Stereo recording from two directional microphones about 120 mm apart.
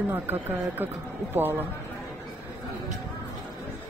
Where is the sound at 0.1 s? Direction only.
15° right (ahead or behind).